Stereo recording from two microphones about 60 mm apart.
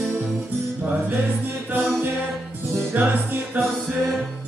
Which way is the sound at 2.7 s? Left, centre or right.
Right.